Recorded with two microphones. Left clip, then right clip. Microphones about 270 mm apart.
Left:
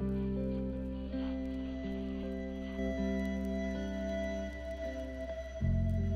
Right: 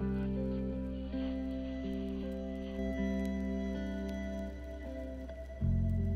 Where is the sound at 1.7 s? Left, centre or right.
Centre.